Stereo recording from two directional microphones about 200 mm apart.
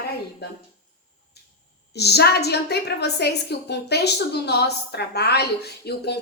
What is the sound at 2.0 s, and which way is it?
A woman's voice, 55° left (ahead or behind).